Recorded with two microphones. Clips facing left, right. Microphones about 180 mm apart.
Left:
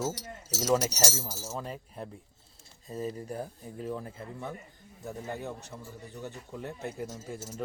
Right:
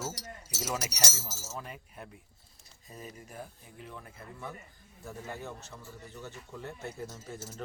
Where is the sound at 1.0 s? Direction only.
15° left (ahead or behind).